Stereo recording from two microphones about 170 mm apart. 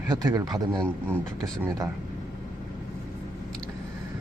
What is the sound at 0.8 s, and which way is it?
Speech, 10° left (ahead or behind).